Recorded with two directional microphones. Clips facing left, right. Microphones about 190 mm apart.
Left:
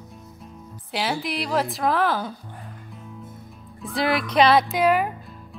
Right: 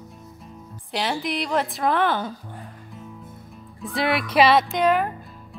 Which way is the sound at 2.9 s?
Centre (ahead or behind).